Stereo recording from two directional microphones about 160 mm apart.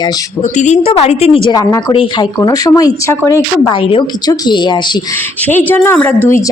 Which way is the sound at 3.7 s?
35° left (ahead or behind).